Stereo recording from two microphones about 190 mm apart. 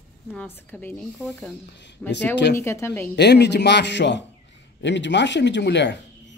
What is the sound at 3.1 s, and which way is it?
A man's voice, 60° left (ahead or behind).